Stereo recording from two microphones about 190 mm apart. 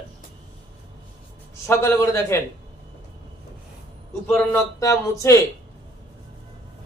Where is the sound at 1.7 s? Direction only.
15° left (ahead or behind).